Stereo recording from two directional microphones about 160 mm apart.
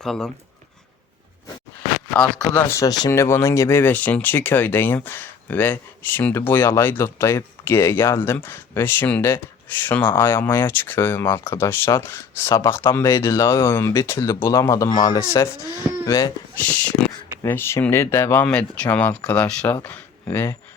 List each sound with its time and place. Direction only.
0.0 s speech: centre (ahead or behind)
2.1 s speech: 5° left (ahead or behind); by 16.3 s 20° left (ahead or behind)
16.6 s speech: 10° left (ahead or behind)